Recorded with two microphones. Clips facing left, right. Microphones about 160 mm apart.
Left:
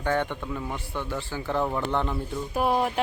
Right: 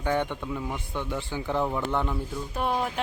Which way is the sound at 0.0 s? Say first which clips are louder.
Even; 15° right (ahead or behind).